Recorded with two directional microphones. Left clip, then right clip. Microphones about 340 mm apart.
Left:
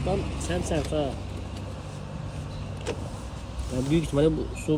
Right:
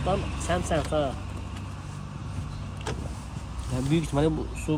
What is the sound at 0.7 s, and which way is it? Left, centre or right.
Speech, right.